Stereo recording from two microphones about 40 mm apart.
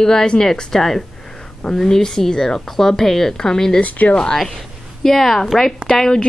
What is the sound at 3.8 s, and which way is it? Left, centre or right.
Speech, left.